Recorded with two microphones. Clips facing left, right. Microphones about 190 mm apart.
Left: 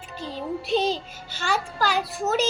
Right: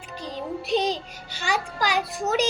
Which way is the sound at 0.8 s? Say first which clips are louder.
Left 1 dB; 15° right (ahead or behind).